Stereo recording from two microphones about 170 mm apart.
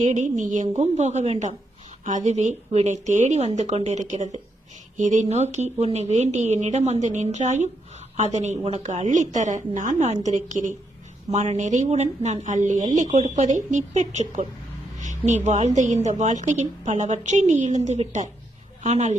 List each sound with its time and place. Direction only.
0.0 s a woman's voice: 45° right (ahead or behind)
14.9 s a sound: 45° right (ahead or behind)
15.4 s a woman's voice: 40° right (ahead or behind)